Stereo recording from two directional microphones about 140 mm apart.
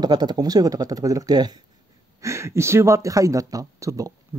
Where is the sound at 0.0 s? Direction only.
30° right (ahead or behind).